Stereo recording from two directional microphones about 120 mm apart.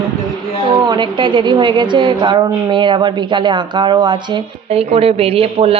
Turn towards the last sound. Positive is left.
turn(degrees=-55)  # may be behind; listen again after turning